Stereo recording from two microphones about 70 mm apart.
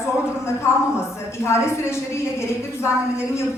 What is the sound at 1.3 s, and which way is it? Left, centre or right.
A woman's voice, left.